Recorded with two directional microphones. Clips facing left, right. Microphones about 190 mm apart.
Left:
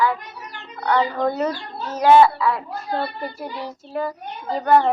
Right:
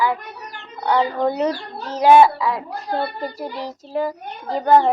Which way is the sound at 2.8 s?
40° right (ahead or behind).